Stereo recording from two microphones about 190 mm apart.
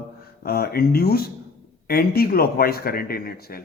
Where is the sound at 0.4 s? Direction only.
55° left (ahead or behind).